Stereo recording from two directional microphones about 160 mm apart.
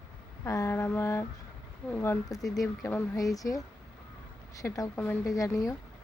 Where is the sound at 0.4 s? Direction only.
20° left (ahead or behind).